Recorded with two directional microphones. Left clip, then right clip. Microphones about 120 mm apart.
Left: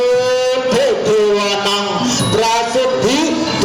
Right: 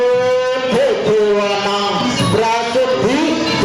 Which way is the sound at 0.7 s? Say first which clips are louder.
Right 1 dB; 30° left (ahead or behind).